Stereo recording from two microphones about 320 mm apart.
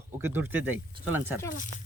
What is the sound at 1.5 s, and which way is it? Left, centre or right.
Speech, left.